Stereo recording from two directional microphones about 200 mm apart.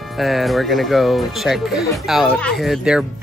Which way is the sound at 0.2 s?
Centre (ahead or behind).